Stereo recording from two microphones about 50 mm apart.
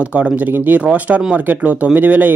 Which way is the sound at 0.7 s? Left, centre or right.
Right.